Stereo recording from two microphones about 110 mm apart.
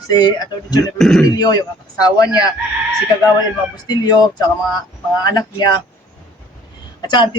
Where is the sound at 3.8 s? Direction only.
40° left (ahead or behind).